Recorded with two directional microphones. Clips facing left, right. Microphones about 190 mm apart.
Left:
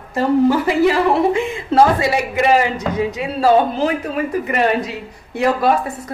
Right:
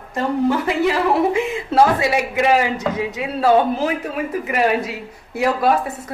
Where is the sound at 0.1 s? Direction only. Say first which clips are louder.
Left 4 dB; 5° left (ahead or behind).